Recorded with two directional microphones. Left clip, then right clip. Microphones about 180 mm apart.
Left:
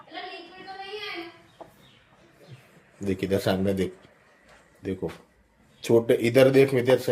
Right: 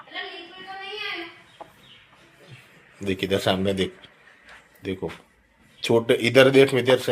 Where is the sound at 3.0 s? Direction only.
15° left (ahead or behind).